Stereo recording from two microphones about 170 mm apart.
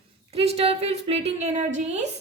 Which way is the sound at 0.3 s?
35° right (ahead or behind).